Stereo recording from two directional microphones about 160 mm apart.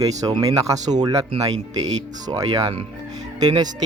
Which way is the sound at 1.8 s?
25° right (ahead or behind).